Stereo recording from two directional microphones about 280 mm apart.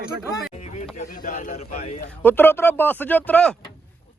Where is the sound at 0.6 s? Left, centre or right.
Left.